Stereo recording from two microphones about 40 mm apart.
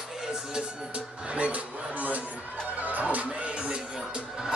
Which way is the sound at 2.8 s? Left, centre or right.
Right.